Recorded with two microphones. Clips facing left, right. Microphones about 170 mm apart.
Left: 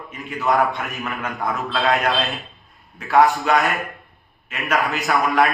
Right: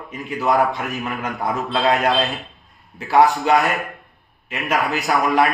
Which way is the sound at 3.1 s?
Centre (ahead or behind).